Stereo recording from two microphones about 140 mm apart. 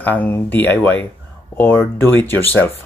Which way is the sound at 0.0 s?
10° left (ahead or behind).